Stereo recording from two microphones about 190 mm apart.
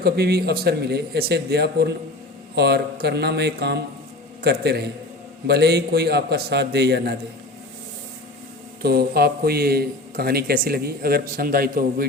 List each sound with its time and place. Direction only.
0.0 s speech: 55° right (ahead or behind)
8.8 s a man's voice: 55° right (ahead or behind)